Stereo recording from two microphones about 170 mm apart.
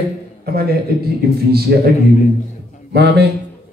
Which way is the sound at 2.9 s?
75° right (ahead or behind).